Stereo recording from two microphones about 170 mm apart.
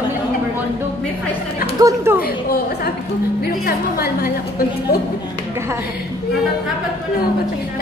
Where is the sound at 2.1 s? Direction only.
65° left (ahead or behind).